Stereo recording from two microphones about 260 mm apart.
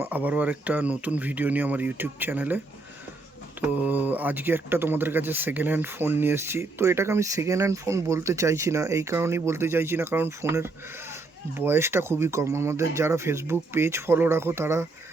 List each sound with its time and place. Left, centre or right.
0.0 s speech: centre
3.6 s speech: centre